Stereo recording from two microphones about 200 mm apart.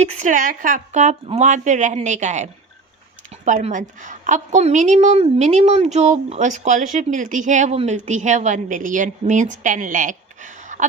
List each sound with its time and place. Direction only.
0.0 s a woman's voice: 35° right (ahead or behind)